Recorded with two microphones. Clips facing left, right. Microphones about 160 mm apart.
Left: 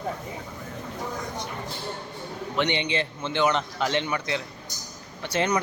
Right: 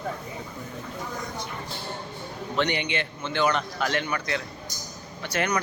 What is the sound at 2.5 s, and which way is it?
A man's voice, 20° left (ahead or behind).